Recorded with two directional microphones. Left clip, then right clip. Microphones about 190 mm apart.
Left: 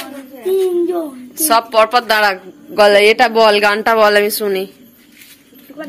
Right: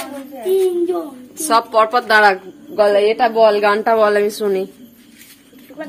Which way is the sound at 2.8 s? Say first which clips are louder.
Left 4 dB; 20° left (ahead or behind).